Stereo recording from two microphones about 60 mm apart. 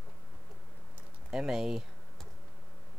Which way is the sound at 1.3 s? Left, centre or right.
Centre.